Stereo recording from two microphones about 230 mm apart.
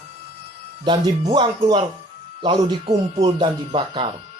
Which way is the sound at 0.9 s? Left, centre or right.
Centre.